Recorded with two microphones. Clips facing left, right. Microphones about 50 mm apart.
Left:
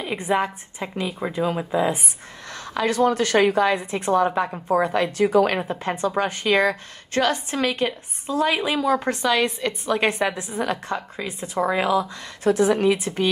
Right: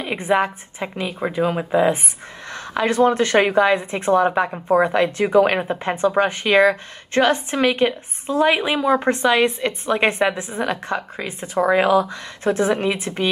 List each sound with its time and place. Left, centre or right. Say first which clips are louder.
0.0 s a woman's voice: right 3 dB; right